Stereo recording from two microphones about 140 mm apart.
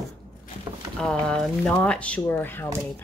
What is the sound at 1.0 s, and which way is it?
Speech, 5° left (ahead or behind).